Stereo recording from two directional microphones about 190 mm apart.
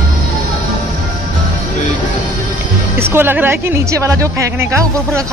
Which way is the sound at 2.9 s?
10° right (ahead or behind).